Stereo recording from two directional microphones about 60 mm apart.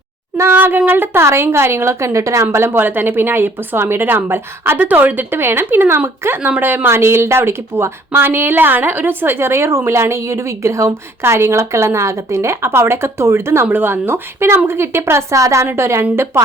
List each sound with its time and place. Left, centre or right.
0.4 s a woman's voice: right
6.9 s a woman's voice: right
13.7 s a woman's voice: right
15.6 s a woman's voice: right